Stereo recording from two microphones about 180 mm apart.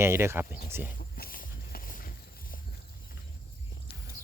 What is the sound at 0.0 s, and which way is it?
Speech, 15° right (ahead or behind).